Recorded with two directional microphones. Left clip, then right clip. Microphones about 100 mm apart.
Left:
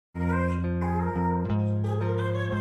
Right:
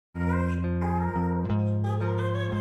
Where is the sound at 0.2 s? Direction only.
Centre (ahead or behind).